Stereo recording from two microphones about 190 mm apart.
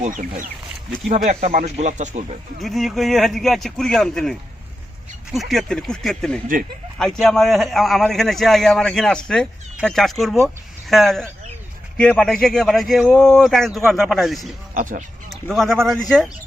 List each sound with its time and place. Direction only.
0.0 s speech: 40° right (ahead or behind)
2.6 s speech: centre (ahead or behind)
14.7 s speech: 40° right (ahead or behind)
15.3 s speech: centre (ahead or behind)